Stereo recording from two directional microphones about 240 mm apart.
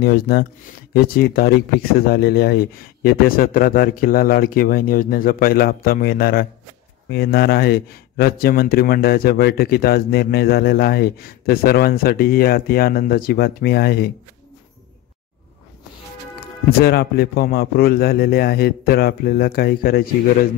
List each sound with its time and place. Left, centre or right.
0.0 s speech: left
16.8 s speech: left